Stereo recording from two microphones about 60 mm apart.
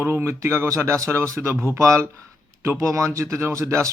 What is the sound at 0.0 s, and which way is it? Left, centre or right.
Speech, right.